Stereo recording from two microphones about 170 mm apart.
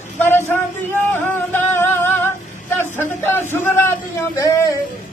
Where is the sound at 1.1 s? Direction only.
15° left (ahead or behind).